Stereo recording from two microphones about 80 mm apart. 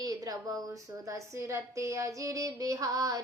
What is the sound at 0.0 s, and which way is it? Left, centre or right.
A woman's voice, right.